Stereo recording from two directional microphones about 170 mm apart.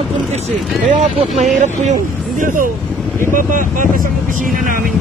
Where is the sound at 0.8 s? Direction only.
45° right (ahead or behind).